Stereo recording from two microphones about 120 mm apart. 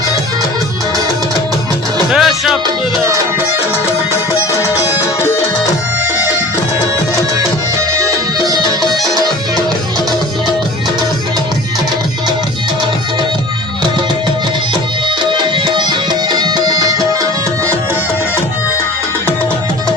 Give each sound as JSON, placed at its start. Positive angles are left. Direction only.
{"t": 2.0, "sound": "music", "side_deg": -5}
{"t": 4.7, "sound": "music", "side_deg": 25}
{"t": 8.4, "sound": "music", "side_deg": -35}
{"t": 15.2, "sound": "music", "side_deg": -40}